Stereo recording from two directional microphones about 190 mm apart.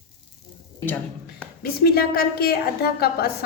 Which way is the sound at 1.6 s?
55° left (ahead or behind).